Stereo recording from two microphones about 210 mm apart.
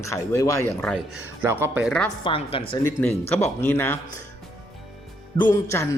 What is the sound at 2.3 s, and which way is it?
Speech, 25° left (ahead or behind).